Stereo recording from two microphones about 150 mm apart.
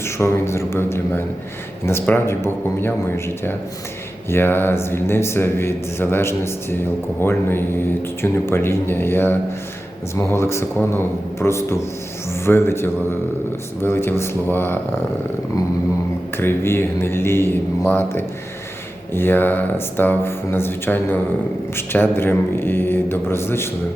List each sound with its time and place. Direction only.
0.0 s a man's voice: 15° left (ahead or behind)
16.4 s speech: 15° left (ahead or behind)